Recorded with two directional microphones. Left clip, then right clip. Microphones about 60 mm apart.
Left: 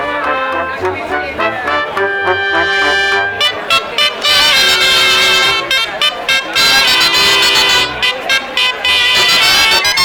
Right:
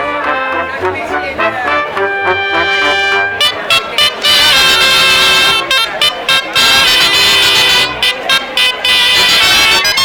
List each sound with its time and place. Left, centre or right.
1.6 s brass instrument: centre
3.4 s music: right
6.6 s music: centre
8.0 s music: right
9.1 s music: centre